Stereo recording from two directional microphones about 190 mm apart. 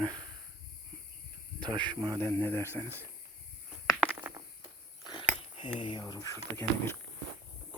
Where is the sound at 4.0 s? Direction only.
10° right (ahead or behind).